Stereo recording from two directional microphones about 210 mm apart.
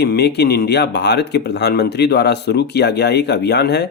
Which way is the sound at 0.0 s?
50° left (ahead or behind).